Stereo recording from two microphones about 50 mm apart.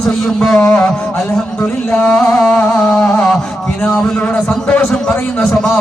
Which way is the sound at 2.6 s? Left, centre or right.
Left.